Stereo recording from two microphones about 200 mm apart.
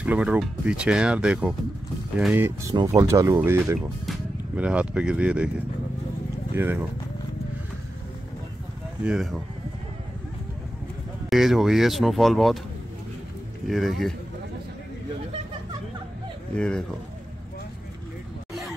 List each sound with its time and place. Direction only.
0.0 s speech: 5° right (ahead or behind)
6.5 s speech: 10° right (ahead or behind)
9.0 s speech: 5° right (ahead or behind)
11.2 s speech: centre (ahead or behind)
13.7 s speech: centre (ahead or behind)
16.5 s speech: 5° left (ahead or behind)
18.5 s a sound: centre (ahead or behind)